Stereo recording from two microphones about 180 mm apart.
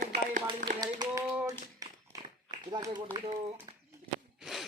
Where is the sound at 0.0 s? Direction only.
50° right (ahead or behind).